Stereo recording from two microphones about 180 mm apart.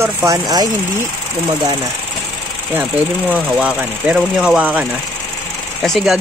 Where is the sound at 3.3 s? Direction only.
10° right (ahead or behind).